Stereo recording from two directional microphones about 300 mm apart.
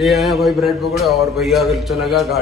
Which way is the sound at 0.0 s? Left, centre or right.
Centre.